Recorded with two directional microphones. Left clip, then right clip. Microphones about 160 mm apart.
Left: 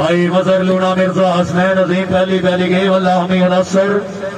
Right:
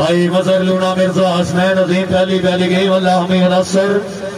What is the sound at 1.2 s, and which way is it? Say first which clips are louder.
Speech: left 1 dB; 30° right (ahead or behind).